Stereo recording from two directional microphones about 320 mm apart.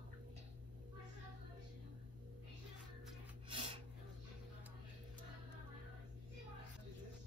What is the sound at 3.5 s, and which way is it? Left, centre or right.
Snort, centre.